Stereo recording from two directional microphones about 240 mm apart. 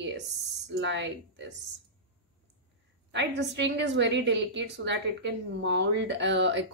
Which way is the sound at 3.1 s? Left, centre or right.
Right.